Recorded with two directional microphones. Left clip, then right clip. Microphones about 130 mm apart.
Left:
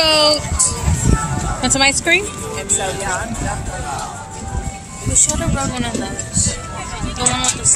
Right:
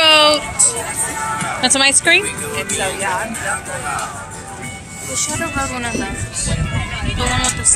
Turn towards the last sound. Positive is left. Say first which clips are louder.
# left 2 dB
turn(degrees=20)  # may be behind; listen again after turning